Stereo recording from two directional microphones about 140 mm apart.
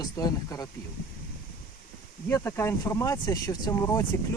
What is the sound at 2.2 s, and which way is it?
Speech, 15° left (ahead or behind).